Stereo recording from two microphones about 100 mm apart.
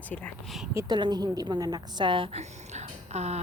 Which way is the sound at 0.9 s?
45° right (ahead or behind).